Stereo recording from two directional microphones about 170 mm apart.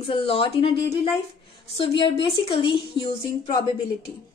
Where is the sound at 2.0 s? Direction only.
30° left (ahead or behind).